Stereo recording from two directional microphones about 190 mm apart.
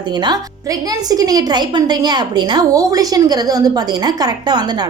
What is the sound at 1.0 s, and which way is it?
A woman's voice, 20° right (ahead or behind).